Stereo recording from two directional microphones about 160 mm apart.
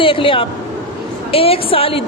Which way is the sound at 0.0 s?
35° left (ahead or behind).